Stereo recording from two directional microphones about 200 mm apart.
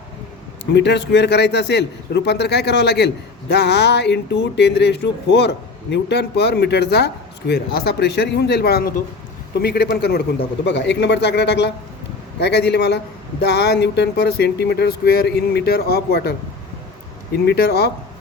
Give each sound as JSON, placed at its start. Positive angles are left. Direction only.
{"t": 0.6, "sound": "speech", "side_deg": 60}
{"t": 17.3, "sound": "speech", "side_deg": 55}